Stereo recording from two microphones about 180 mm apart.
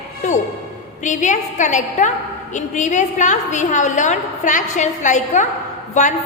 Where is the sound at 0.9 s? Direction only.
45° left (ahead or behind).